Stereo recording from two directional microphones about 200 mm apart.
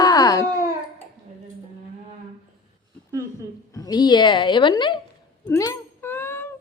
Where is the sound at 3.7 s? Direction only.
20° left (ahead or behind).